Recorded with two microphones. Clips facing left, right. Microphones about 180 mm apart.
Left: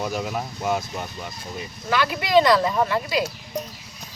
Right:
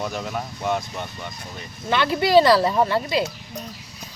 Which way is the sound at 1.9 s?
25° right (ahead or behind).